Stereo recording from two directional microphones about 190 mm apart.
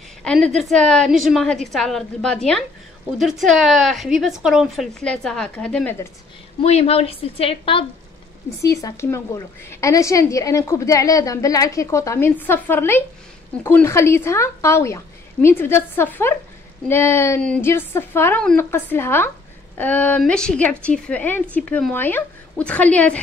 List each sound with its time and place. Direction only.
0.2 s a woman's voice: 5° left (ahead or behind)
6.6 s a woman's voice: 35° left (ahead or behind)
8.6 s a woman's voice: 15° left (ahead or behind)